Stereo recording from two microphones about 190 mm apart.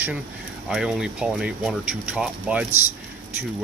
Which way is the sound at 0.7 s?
5° right (ahead or behind).